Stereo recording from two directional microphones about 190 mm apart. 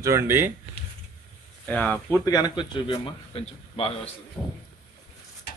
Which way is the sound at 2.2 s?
20° left (ahead or behind).